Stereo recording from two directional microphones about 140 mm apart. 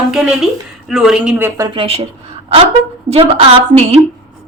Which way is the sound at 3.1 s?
45° right (ahead or behind).